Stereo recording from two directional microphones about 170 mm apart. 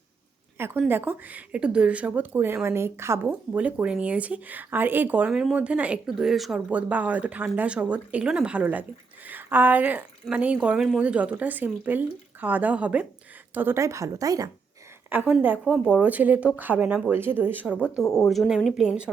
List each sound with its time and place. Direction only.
0.6 s a woman's voice: 10° right (ahead or behind)
18.0 s speech: 15° left (ahead or behind)
18.3 s speech: centre (ahead or behind)